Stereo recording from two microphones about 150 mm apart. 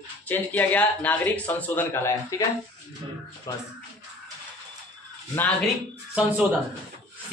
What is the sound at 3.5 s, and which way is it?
Music, 25° left (ahead or behind).